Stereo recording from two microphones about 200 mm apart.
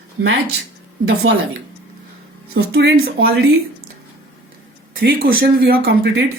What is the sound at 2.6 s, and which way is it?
Speech, 75° right (ahead or behind).